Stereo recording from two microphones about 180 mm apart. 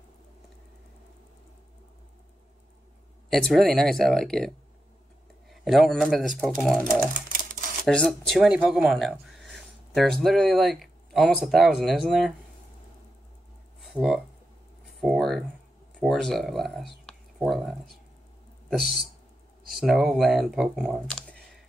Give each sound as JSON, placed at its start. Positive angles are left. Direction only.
{"t": 3.3, "sound": "speech", "side_deg": 0}
{"t": 5.5, "sound": "speech", "side_deg": 0}
{"t": 7.2, "sound": "typewriter", "side_deg": -50}
{"t": 7.8, "sound": "speech", "side_deg": 5}
{"t": 13.9, "sound": "speech", "side_deg": -5}
{"t": 14.9, "sound": "a sound", "side_deg": 0}
{"t": 16.0, "sound": "speech", "side_deg": 0}
{"t": 17.0, "sound": "a sound", "side_deg": 0}
{"t": 18.7, "sound": "speech", "side_deg": 0}